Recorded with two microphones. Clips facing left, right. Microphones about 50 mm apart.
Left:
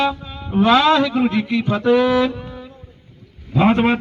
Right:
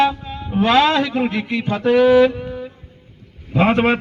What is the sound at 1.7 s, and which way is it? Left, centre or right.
Speech, right.